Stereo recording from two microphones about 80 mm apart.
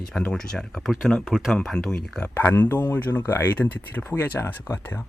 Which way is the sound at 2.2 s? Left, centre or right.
Left.